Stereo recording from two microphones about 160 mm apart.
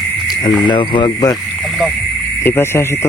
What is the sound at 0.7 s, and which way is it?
Speech, 30° left (ahead or behind).